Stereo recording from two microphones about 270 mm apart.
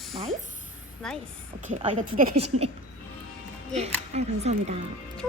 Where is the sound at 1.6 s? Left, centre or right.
Right.